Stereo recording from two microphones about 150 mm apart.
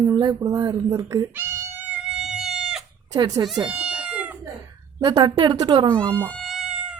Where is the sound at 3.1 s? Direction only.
25° right (ahead or behind).